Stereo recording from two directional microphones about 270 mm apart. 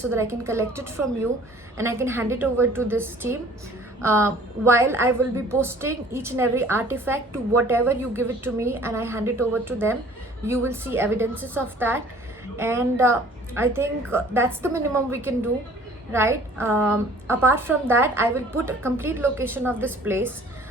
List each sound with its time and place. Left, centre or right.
0.1 s a woman's voice: centre